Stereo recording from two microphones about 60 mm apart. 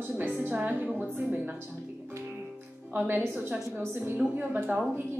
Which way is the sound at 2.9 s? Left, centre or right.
Right.